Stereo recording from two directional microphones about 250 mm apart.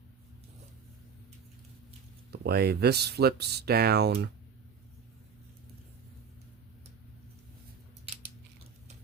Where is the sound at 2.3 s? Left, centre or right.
Right.